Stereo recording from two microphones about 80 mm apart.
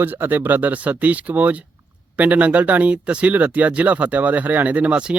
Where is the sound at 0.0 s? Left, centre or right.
Right.